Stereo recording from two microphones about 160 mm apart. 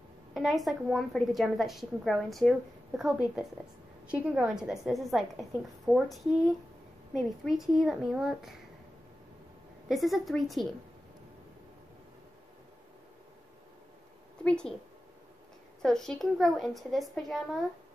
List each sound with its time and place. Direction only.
0.3 s a woman's voice: centre (ahead or behind)
9.8 s a woman's voice: centre (ahead or behind)
14.4 s a woman's voice: 5° left (ahead or behind)
15.8 s a woman's voice: 5° left (ahead or behind)